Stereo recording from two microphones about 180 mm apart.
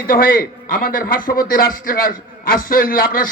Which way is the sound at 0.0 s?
50° left (ahead or behind).